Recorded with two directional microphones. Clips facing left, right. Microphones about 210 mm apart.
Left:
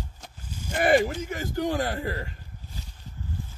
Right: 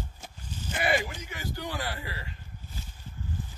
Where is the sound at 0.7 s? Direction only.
45° left (ahead or behind).